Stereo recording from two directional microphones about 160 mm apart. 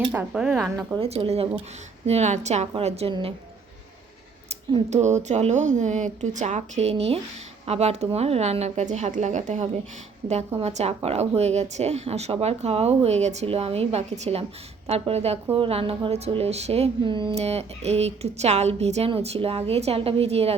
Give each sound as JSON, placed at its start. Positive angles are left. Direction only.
{"t": 0.1, "sound": "speech", "side_deg": -10}
{"t": 0.9, "sound": "speech", "side_deg": -35}
{"t": 4.7, "sound": "speech", "side_deg": -45}